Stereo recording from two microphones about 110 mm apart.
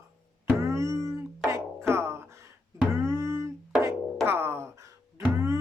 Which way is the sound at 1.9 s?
25° right (ahead or behind).